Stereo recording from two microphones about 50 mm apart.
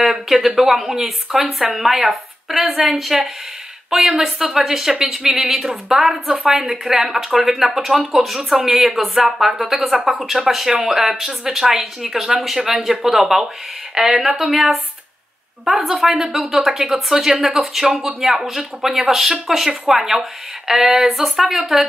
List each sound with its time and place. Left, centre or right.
0.0 s speech: centre
6.3 s speech: centre
6.6 s speech: centre